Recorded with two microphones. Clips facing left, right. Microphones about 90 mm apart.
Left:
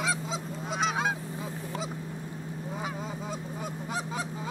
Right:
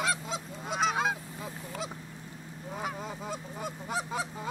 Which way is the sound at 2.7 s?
Centre (ahead or behind).